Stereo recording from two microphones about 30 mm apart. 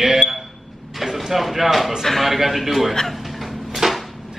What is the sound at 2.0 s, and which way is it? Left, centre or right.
Speech, centre.